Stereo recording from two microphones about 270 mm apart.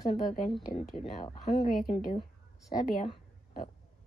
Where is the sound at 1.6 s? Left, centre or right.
Left.